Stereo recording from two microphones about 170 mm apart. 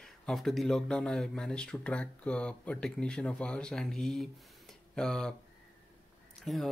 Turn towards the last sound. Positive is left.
turn(degrees=0)  # may be behind; listen again after turning